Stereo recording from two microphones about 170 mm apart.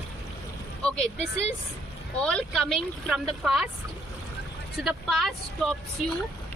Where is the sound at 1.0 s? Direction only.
40° left (ahead or behind).